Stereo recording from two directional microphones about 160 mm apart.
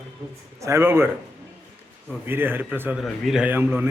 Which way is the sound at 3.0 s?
Centre (ahead or behind).